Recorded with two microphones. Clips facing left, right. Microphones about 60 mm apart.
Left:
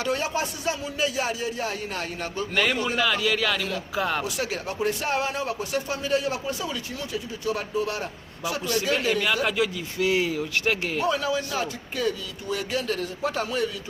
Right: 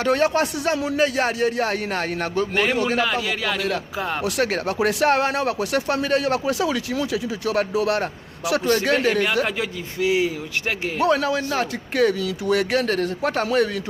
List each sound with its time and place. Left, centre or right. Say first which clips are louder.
0.0 s speech: right 7 dB; right
3.0 s a man's voice: right 1 dB; right
4.2 s speech: right 7 dB; right
8.6 s speech: right 5 dB; right
9.0 s a man's voice: right 4 dB; right
10.1 s speech: right 3 dB; centre
11.0 s speech: right 8 dB; right